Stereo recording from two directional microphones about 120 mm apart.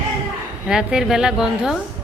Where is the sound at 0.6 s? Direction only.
5° right (ahead or behind).